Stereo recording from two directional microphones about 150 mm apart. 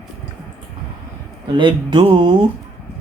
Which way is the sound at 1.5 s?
30° right (ahead or behind).